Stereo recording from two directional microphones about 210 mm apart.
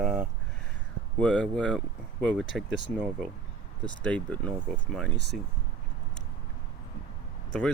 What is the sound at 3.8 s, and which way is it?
Speech, 5° left (ahead or behind).